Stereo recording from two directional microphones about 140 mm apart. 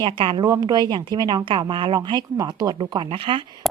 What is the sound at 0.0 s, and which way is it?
Speech, 40° right (ahead or behind).